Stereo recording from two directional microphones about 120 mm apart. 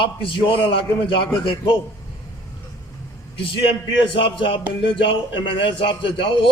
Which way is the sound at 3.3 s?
45° left (ahead or behind).